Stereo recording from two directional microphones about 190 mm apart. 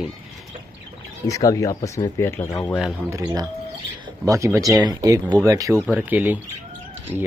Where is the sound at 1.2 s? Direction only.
15° left (ahead or behind).